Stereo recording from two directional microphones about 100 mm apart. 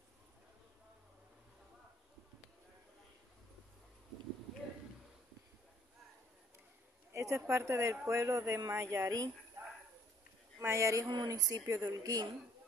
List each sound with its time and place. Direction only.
7.1 s speech: 30° right (ahead or behind)
10.6 s speech: 30° right (ahead or behind)
11.1 s speech: 45° right (ahead or behind)